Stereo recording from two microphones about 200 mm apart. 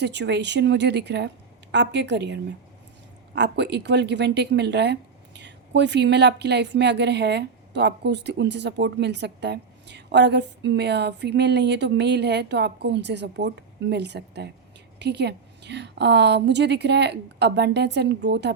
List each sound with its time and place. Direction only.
0.0 s speech: 60° right (ahead or behind)